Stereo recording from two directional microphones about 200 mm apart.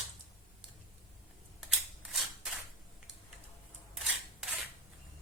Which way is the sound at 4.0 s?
Centre (ahead or behind).